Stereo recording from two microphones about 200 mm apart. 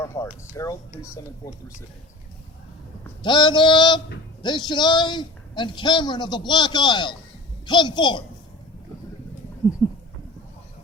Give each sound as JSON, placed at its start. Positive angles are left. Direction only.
{"t": 0.0, "sound": "speech", "side_deg": 15}
{"t": 3.2, "sound": "a man's voice", "side_deg": 20}
{"t": 9.8, "sound": "goat", "side_deg": 10}